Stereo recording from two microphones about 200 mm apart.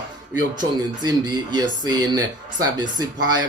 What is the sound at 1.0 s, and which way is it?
Speech, 20° right (ahead or behind).